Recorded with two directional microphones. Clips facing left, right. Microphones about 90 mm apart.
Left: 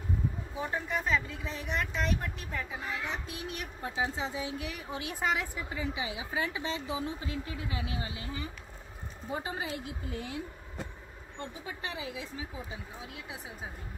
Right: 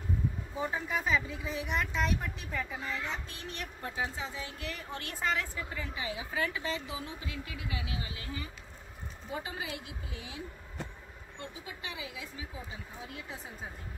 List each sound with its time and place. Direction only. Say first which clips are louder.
0.6 s speech: even; centre (ahead or behind)
3.9 s a woman's voice: left 4 dB; 20° left (ahead or behind)
10.0 s speech: left 7 dB; 50° left (ahead or behind)
11.3 s a woman's voice: left 3 dB; 35° left (ahead or behind)